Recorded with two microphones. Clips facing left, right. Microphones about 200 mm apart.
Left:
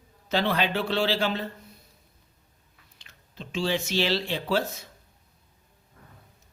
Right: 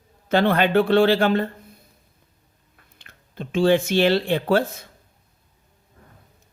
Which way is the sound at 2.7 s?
55° right (ahead or behind).